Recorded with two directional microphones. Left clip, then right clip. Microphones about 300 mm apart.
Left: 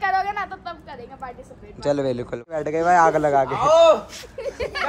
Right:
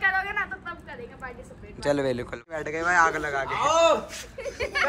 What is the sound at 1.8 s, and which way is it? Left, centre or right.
A man's voice, centre.